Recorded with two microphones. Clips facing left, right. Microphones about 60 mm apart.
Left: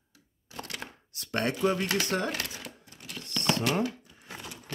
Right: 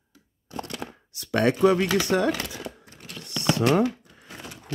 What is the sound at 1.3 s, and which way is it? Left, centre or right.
Speech, right.